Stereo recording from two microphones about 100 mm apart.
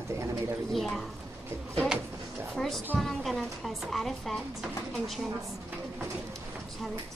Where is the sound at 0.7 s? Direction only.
Centre (ahead or behind).